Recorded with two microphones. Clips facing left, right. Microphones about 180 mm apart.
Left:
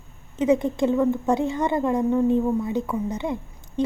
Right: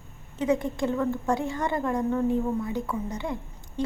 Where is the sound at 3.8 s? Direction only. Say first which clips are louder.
Left 5 dB; 20° left (ahead or behind).